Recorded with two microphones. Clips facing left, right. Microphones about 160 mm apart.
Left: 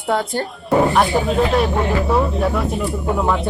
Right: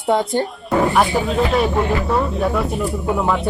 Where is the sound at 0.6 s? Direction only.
Centre (ahead or behind).